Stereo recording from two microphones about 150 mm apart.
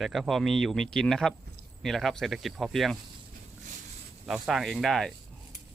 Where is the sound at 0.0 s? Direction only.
Centre (ahead or behind).